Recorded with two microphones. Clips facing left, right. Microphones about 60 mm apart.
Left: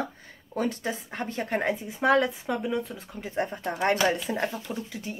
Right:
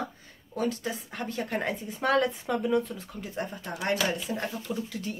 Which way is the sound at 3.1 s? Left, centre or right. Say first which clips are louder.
Left 6 dB; left.